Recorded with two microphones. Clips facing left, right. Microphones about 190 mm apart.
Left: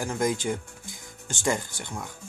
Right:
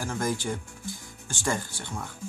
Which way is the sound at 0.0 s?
20° left (ahead or behind).